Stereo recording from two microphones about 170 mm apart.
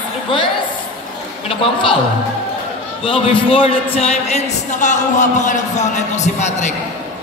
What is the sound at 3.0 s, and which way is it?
A man's voice, 30° left (ahead or behind).